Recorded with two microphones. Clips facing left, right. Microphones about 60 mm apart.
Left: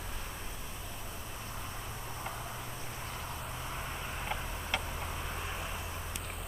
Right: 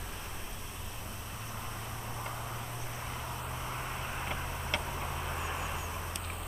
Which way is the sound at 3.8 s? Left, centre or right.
Centre.